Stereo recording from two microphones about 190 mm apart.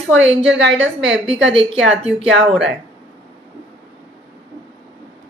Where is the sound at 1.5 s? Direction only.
30° right (ahead or behind).